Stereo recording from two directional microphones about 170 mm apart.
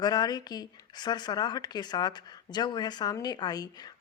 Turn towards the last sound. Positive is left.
turn(degrees=25)  # may be behind; listen again after turning